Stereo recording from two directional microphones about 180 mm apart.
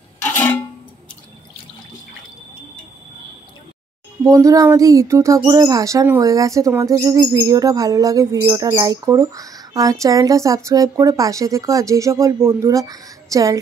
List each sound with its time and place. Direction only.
0.2 s music: 10° left (ahead or behind)
4.2 s a sound: 20° right (ahead or behind)
5.5 s speech: 20° right (ahead or behind)